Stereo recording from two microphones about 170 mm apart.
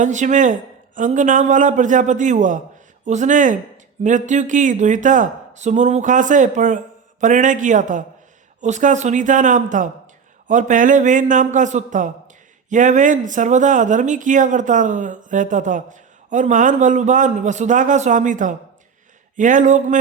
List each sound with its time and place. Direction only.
0.0 s speech: 45° right (ahead or behind)